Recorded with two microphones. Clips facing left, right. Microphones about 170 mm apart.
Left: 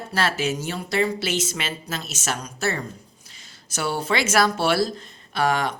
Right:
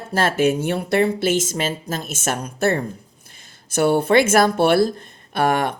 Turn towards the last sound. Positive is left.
turn(degrees=-55)  # may be behind; listen again after turning